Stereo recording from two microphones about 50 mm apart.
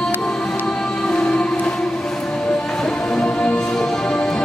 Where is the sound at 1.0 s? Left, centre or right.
Centre.